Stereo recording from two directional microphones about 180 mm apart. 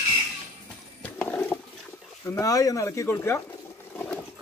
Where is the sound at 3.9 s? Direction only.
10° left (ahead or behind).